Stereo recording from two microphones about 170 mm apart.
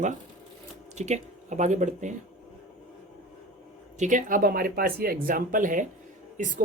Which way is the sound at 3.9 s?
50° right (ahead or behind).